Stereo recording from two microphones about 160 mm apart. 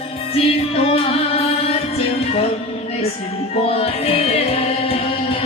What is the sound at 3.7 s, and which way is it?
Music, 40° left (ahead or behind).